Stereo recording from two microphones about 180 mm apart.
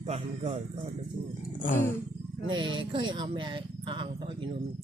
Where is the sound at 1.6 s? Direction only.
45° left (ahead or behind).